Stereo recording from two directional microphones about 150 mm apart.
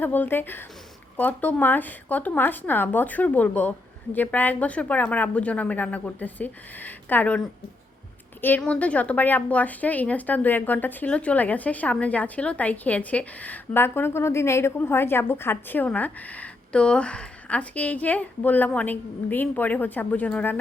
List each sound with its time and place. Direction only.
0.0 s a woman's voice: 15° left (ahead or behind)